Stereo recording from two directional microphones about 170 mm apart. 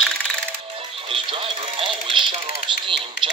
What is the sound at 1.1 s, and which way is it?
Speech, 30° right (ahead or behind).